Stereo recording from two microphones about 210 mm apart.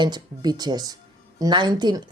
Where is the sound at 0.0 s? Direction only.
20° right (ahead or behind).